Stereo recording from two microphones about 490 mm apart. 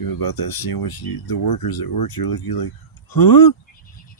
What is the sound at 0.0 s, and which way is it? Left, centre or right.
Speech, left.